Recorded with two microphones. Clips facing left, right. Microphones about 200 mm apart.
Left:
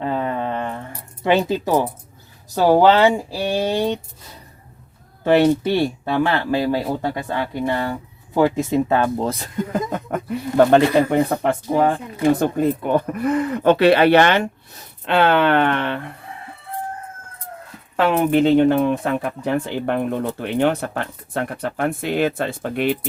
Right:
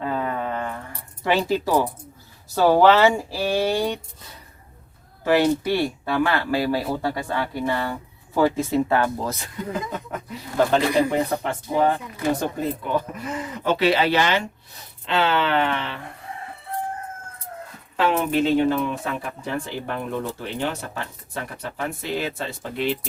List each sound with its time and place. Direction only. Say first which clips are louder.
0.0 s a sound: left 3 dB; 25° left (ahead or behind)
1.2 s speech: left 3 dB; 20° left (ahead or behind)
5.2 s speech: left 4 dB; 25° left (ahead or behind)
10.1 s speech: left 9 dB; 55° left (ahead or behind)
17.9 s speech: left 4 dB; 50° left (ahead or behind)